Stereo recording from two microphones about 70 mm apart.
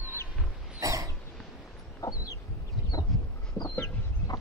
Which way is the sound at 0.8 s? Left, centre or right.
Right.